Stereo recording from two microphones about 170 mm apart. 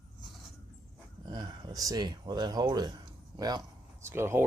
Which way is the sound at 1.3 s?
25° right (ahead or behind).